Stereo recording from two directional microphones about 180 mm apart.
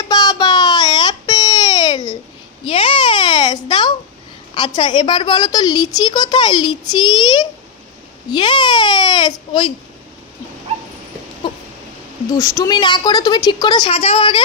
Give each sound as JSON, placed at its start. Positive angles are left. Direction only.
{"t": 0.1, "sound": "baby cry", "side_deg": 20}
{"t": 2.6, "sound": "babbling", "side_deg": 30}
{"t": 4.6, "sound": "a woman's voice", "side_deg": 25}
{"t": 12.3, "sound": "a woman's voice", "side_deg": 15}